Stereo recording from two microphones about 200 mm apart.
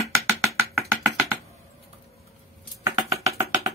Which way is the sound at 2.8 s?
15° right (ahead or behind).